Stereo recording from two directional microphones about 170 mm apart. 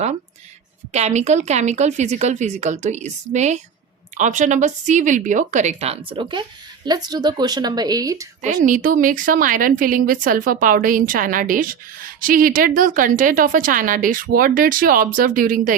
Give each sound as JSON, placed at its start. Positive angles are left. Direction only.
{"t": 0.9, "sound": "a woman's voice", "side_deg": -40}
{"t": 8.6, "sound": "a woman's voice", "side_deg": -50}